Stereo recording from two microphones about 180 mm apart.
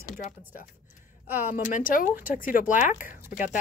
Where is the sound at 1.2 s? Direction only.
10° right (ahead or behind).